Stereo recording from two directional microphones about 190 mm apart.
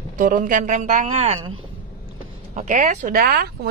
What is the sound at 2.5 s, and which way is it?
Speech, 40° right (ahead or behind).